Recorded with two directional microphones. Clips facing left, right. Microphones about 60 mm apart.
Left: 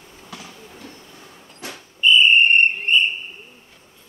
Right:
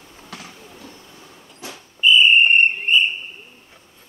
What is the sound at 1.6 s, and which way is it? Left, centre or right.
Whistle, left.